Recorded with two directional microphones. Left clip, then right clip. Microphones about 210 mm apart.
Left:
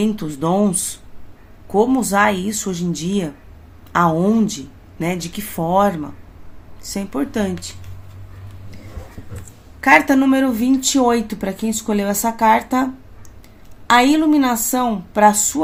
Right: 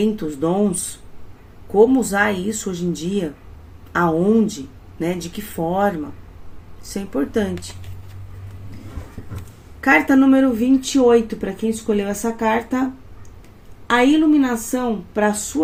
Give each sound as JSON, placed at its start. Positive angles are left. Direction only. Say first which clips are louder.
{"t": 0.0, "sound": "speech", "louder": "right 1 dB", "side_deg": 45}
{"t": 1.7, "sound": "speech", "louder": "right 1 dB", "side_deg": 45}
{"t": 9.8, "sound": "speech", "louder": "left 2 dB", "side_deg": 45}